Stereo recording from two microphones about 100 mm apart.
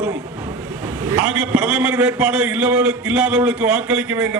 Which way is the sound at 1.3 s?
15° right (ahead or behind).